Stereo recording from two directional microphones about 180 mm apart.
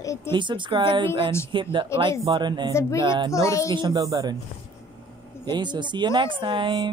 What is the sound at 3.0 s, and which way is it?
Speech, 25° right (ahead or behind).